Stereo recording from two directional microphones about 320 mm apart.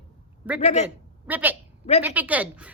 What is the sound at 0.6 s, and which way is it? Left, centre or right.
Speech, left.